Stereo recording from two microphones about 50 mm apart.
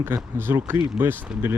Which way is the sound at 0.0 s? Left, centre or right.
Right.